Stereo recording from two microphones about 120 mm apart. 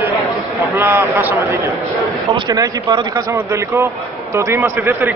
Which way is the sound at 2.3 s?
35° right (ahead or behind).